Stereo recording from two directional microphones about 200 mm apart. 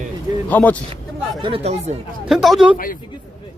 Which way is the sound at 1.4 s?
30° right (ahead or behind).